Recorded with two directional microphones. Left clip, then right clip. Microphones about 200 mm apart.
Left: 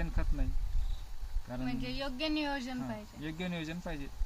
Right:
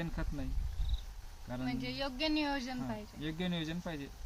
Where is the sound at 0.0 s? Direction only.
10° left (ahead or behind).